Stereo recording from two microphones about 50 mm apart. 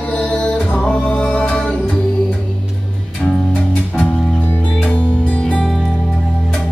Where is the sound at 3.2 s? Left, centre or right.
Centre.